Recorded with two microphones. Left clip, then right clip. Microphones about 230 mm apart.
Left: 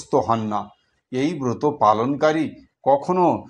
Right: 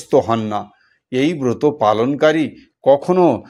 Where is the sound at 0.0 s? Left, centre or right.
Right.